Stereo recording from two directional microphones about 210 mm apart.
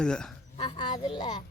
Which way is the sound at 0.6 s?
25° left (ahead or behind).